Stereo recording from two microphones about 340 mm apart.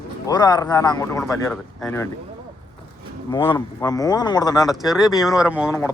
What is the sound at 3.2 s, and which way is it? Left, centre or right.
Speech, centre.